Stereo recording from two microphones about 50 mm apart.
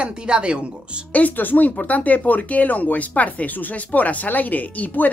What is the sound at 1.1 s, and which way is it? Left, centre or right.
Speech, left.